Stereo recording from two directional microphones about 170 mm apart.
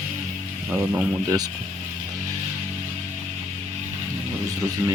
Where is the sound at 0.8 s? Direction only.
5° right (ahead or behind).